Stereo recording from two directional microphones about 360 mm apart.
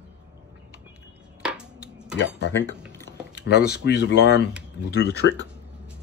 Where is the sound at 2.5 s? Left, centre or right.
Centre.